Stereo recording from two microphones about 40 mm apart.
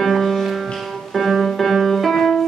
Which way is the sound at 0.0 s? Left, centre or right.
Centre.